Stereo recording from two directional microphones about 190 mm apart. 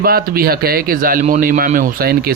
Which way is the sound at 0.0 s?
50° right (ahead or behind).